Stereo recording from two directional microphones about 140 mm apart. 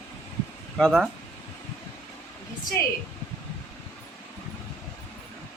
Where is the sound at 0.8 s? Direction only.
Centre (ahead or behind).